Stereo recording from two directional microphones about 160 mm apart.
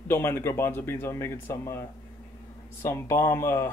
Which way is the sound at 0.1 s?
15° left (ahead or behind).